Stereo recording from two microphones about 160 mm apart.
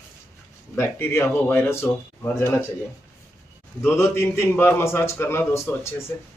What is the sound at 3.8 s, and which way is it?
A man's voice, 15° left (ahead or behind).